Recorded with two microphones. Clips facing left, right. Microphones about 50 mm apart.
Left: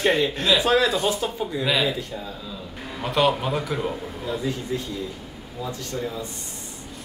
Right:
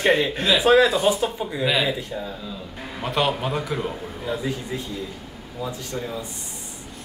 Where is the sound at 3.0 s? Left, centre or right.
Centre.